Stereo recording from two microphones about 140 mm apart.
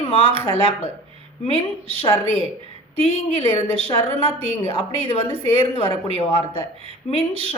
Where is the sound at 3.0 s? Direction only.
45° right (ahead or behind).